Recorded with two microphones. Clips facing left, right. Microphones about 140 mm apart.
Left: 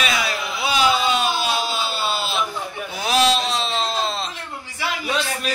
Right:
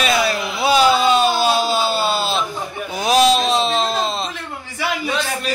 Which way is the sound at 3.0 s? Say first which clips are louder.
Right 4 dB; 15° right (ahead or behind).